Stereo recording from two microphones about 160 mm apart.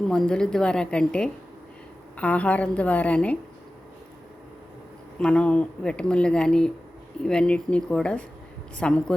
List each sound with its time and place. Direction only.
0.1 s a woman's voice: 5° left (ahead or behind)
5.2 s a woman's voice: 5° left (ahead or behind)